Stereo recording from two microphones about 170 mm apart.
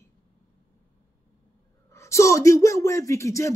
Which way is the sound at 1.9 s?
15° left (ahead or behind).